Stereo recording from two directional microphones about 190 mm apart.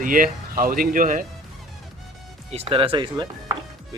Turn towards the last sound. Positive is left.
turn(degrees=-25)  # may be behind; listen again after turning